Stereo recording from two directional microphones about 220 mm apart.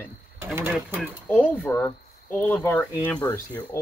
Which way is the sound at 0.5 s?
10° right (ahead or behind).